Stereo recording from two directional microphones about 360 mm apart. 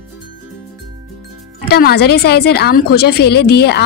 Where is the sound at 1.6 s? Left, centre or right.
Left.